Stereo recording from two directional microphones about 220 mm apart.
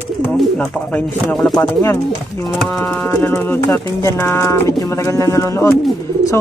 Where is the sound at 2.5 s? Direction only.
Centre (ahead or behind).